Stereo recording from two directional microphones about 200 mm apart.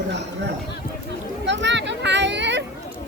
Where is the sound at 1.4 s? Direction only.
65° right (ahead or behind).